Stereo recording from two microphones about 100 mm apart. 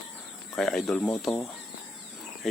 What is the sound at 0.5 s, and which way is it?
Speech, 5° left (ahead or behind).